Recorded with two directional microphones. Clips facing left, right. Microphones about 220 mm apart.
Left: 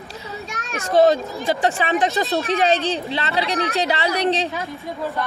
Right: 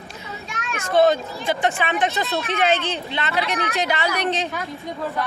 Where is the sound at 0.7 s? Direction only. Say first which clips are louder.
Left 2 dB; 35° left (ahead or behind).